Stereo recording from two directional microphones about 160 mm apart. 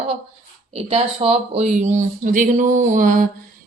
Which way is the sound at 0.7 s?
40° right (ahead or behind).